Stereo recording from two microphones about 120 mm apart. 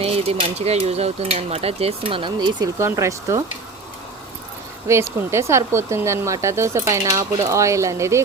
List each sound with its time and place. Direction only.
0.0 s speech: 60° right (ahead or behind); by 2.6 s 40° right (ahead or behind)
2.7 s speech: 25° right (ahead or behind)
4.9 s speech: 20° right (ahead or behind)